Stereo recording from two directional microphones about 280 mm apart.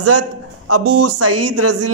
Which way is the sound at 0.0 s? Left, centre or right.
Right.